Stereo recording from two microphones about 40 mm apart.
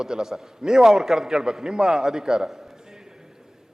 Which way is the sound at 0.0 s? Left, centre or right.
Centre.